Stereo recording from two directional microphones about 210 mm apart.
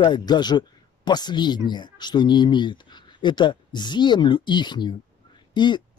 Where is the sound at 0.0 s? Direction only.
20° left (ahead or behind).